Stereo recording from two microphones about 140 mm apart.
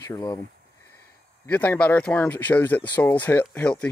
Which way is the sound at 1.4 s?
10° left (ahead or behind).